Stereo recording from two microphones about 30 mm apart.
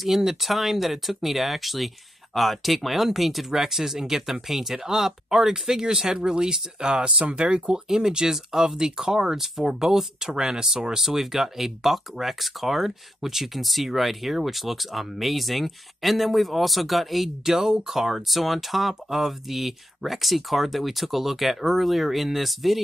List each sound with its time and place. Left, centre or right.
0.0 s speech: centre
11.0 s speech: centre
17.5 s speech: centre